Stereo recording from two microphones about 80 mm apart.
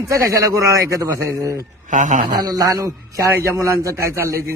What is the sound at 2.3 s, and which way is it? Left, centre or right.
A man's voice, right.